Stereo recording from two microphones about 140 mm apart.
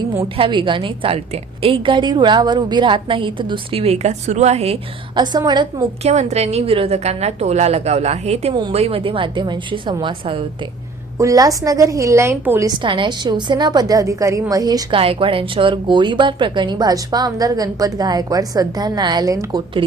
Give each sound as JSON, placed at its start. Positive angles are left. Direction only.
{"t": 0.3, "sound": "a woman's voice", "side_deg": -40}
{"t": 5.1, "sound": "a woman's voice", "side_deg": -30}
{"t": 6.0, "sound": "a woman's voice", "side_deg": -55}
{"t": 11.2, "sound": "a woman's voice", "side_deg": -25}
{"t": 12.8, "sound": "a woman's voice", "side_deg": -35}
{"t": 14.9, "sound": "a woman's voice", "side_deg": -40}